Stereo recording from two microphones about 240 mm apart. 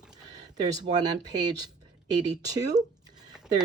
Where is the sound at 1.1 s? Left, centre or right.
Centre.